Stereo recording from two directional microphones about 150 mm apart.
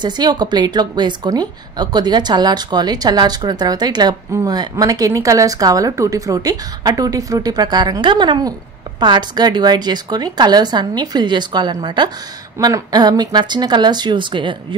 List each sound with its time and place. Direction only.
0.0 s a woman's voice: 30° right (ahead or behind)